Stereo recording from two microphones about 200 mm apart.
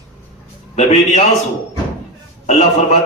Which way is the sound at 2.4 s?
35° left (ahead or behind).